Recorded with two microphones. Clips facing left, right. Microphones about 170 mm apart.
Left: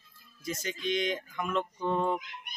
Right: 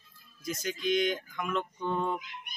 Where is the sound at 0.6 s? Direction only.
Centre (ahead or behind).